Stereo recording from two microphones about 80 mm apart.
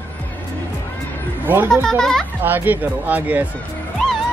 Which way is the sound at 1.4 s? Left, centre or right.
Right.